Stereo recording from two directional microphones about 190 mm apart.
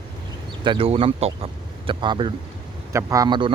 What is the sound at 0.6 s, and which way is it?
Speech, 30° right (ahead or behind).